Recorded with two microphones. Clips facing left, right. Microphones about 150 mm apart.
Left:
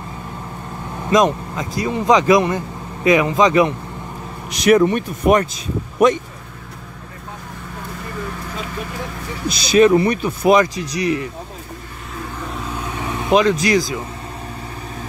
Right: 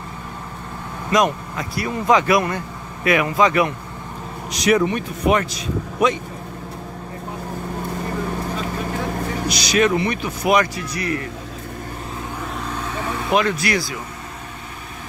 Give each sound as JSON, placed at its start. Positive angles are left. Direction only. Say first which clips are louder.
{"t": 1.1, "sound": "speech", "louder": "left 3 dB", "side_deg": 20}
{"t": 4.5, "sound": "speech", "louder": "left 4 dB", "side_deg": 50}
{"t": 9.8, "sound": "speech", "louder": "left 6 dB", "side_deg": 35}
{"t": 13.2, "sound": "speech", "louder": "left 5 dB", "side_deg": 20}